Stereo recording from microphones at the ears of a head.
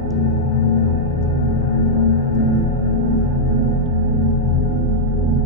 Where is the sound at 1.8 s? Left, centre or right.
Left.